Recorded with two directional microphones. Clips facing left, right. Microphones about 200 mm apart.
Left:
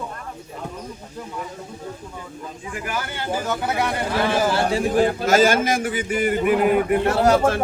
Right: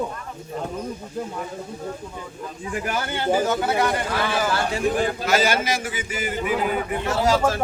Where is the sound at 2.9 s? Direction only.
20° right (ahead or behind).